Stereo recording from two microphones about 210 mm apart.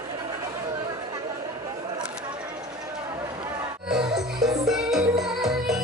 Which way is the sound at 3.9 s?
Centre (ahead or behind).